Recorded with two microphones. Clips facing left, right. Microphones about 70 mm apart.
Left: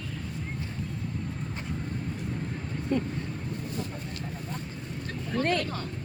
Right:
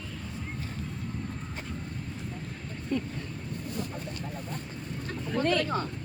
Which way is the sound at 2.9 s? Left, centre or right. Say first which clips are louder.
Left 3 dB; left.